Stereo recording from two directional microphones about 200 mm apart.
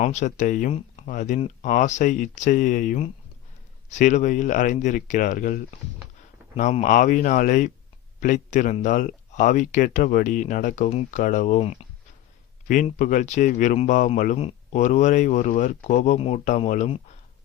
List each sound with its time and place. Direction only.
0.0 s speech: 35° left (ahead or behind)